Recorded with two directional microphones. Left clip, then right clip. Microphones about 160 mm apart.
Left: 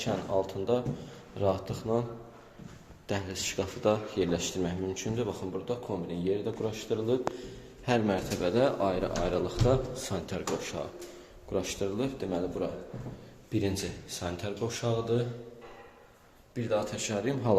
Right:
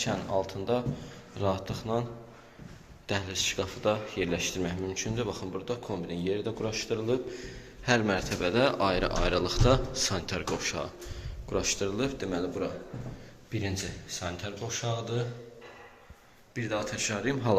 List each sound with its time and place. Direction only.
0.0 s a man's voice: 15° left (ahead or behind)
3.1 s a man's voice: 20° left (ahead or behind)
13.5 s speech: 40° left (ahead or behind); by 14.9 s 60° left (ahead or behind)
16.6 s speech: 30° left (ahead or behind); by 17.6 s 15° left (ahead or behind)